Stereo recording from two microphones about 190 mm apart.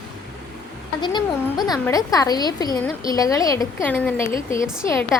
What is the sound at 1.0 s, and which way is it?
A woman's voice, 25° left (ahead or behind).